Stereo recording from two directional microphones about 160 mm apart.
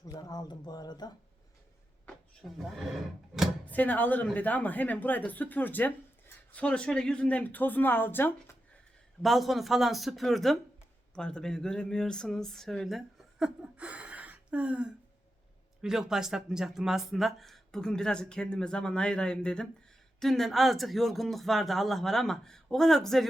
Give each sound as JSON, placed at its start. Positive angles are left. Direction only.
{"t": 0.0, "sound": "speech", "side_deg": 25}
{"t": 2.0, "sound": "a sound", "side_deg": 0}
{"t": 3.7, "sound": "speech", "side_deg": 10}
{"t": 9.2, "sound": "speech", "side_deg": 0}